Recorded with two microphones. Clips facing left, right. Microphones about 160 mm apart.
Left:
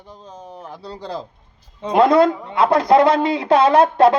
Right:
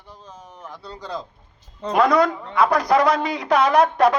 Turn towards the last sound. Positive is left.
turn(degrees=25)  # may be behind; listen again after turning